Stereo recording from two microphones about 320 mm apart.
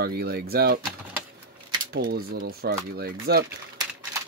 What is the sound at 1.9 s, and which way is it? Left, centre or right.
Speech, right.